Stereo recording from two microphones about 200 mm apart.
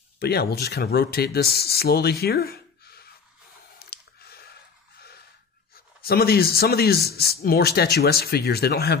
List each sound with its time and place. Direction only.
0.2 s speech: 50° left (ahead or behind)
3.8 s a sound: 50° left (ahead or behind)
6.0 s speech: 50° left (ahead or behind)